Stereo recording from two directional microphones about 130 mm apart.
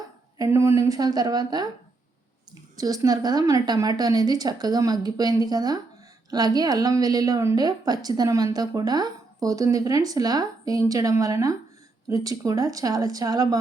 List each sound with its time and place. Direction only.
0.3 s a woman's voice: 20° right (ahead or behind)
2.7 s a woman's voice: 30° right (ahead or behind)